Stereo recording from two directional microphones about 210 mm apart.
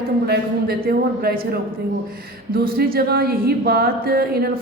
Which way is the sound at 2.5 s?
45° right (ahead or behind).